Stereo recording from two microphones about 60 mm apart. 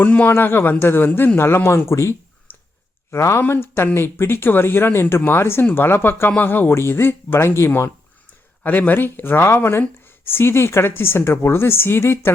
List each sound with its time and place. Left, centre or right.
0.0 s speech: left
2.5 s clicking: left
3.1 s speech: left
8.6 s speech: left